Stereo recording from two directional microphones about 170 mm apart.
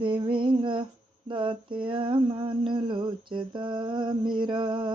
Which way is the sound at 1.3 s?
30° right (ahead or behind).